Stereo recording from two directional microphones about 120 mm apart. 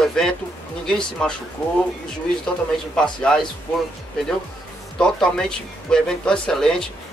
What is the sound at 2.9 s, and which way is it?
Speech, 5° left (ahead or behind).